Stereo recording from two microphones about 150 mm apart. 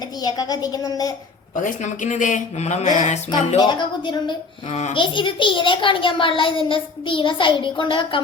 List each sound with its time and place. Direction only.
0.2 s a woman's voice: 25° left (ahead or behind)
1.6 s speech: 55° left (ahead or behind)
3.6 s a child's voice: 30° left (ahead or behind)